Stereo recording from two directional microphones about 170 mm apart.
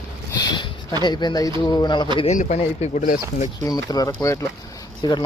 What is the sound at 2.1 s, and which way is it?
Speech, 45° left (ahead or behind).